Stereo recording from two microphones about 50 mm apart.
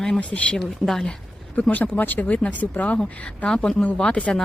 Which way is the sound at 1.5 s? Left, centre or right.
Left.